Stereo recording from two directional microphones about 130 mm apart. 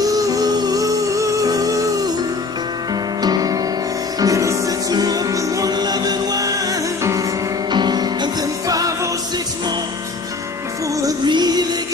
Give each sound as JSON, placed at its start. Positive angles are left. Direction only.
{"t": 0.0, "sound": "music", "side_deg": -25}
{"t": 2.9, "sound": "music", "side_deg": -30}
{"t": 10.9, "sound": "music", "side_deg": -25}